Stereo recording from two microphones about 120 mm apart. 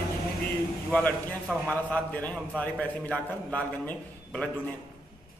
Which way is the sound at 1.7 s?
10° left (ahead or behind).